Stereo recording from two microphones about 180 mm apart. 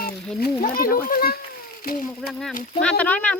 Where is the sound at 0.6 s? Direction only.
50° left (ahead or behind).